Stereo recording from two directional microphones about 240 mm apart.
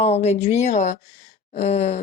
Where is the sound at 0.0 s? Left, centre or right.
Left.